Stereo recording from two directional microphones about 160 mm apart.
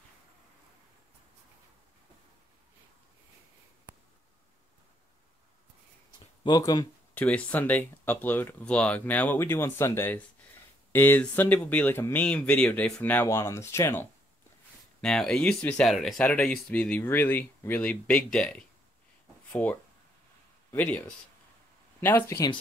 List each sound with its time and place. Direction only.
6.4 s speech: 25° left (ahead or behind)
7.2 s speech: 10° left (ahead or behind)
15.0 s speech: 5° left (ahead or behind)
22.0 s speech: 10° left (ahead or behind)